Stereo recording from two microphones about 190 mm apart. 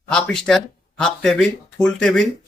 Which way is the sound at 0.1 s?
5° left (ahead or behind).